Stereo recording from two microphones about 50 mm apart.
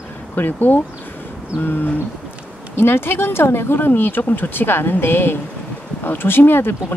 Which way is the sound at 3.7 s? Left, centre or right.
Left.